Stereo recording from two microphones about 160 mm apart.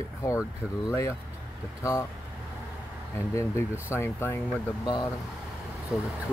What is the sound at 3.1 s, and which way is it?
Speech, 20° left (ahead or behind).